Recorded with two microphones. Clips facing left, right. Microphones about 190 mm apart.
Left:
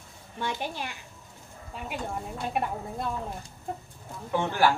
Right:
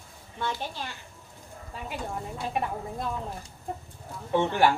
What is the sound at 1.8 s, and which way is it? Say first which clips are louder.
Speech: left 1 dB; centre (ahead or behind).